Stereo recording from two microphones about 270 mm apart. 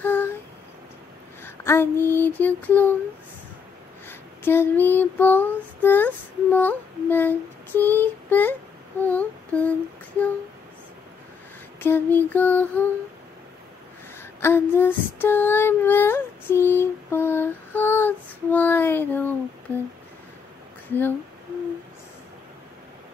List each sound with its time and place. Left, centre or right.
0.0 s a sound: centre
1.4 s a sound: centre
2.1 s female singing: centre
4.1 s female singing: centre
9.0 s humming: centre
11.8 s female singing: centre
14.4 s female singing: centre
19.7 s humming: centre